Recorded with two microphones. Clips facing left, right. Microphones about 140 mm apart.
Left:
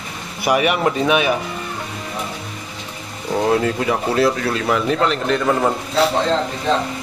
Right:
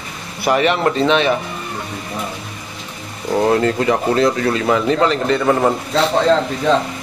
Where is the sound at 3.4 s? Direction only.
Centre (ahead or behind).